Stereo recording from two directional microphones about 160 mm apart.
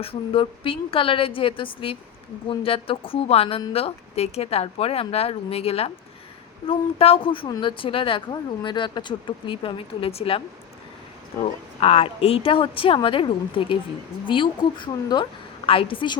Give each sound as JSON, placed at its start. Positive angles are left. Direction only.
{"t": 0.0, "sound": "a woman's voice", "side_deg": 35}
{"t": 11.4, "sound": "a woman's voice", "side_deg": 40}